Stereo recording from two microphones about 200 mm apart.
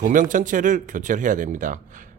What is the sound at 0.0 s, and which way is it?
A man's voice, 40° right (ahead or behind).